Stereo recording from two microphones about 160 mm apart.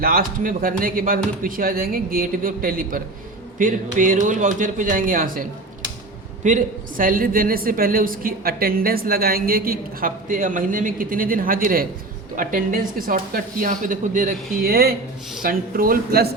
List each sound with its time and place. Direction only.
0.0 s a woman's voice: 65° right (ahead or behind)
14.5 s a woman's voice: 70° right (ahead or behind)